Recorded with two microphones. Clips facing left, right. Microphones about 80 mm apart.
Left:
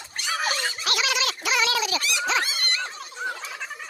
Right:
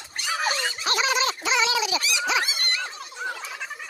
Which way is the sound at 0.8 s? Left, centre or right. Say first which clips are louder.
Right 4 dB; right.